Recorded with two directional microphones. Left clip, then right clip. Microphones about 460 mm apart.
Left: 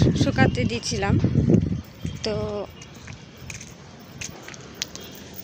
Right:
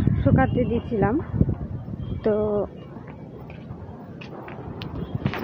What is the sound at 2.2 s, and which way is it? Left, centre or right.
Speech, right.